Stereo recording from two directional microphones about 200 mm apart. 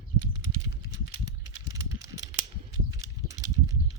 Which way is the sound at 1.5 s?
20° right (ahead or behind).